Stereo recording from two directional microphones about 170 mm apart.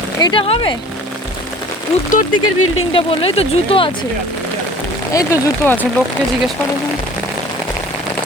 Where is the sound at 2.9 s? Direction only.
35° left (ahead or behind).